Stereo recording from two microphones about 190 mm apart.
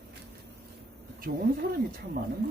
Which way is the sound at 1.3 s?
60° right (ahead or behind).